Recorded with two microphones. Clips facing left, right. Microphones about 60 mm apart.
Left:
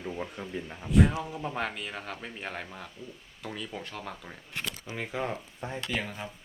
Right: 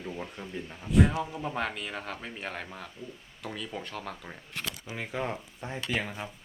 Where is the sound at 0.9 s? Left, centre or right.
Centre.